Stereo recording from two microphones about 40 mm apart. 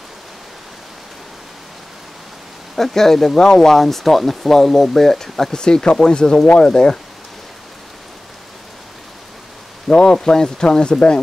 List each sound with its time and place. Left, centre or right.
2.7 s speech: centre
5.5 s speech: centre
9.9 s speech: centre